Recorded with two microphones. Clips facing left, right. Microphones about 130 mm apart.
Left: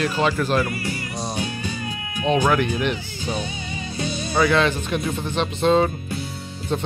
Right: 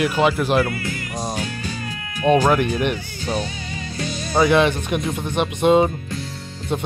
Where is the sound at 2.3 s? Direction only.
15° right (ahead or behind).